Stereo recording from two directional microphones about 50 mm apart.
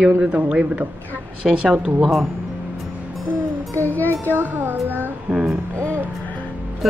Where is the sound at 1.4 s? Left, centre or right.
Centre.